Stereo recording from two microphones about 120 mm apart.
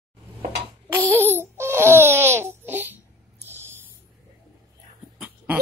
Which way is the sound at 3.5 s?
20° right (ahead or behind).